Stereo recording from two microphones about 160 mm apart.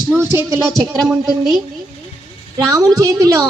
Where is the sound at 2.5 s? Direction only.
25° right (ahead or behind).